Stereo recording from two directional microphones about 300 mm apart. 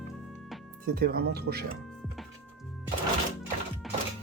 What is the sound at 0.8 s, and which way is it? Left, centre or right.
Speech, right.